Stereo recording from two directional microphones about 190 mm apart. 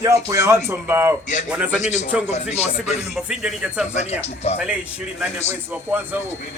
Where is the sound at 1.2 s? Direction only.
40° left (ahead or behind).